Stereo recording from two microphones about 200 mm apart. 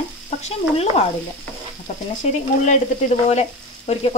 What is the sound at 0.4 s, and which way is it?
Speech, 30° left (ahead or behind).